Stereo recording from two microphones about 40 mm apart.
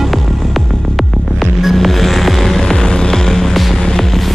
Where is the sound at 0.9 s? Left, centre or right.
Centre.